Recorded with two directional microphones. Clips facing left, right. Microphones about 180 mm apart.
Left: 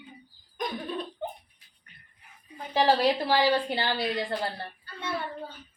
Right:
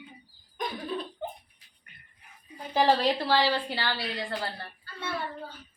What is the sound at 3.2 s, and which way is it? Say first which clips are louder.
A woman's voice: left 2 dB; 15° left (ahead or behind).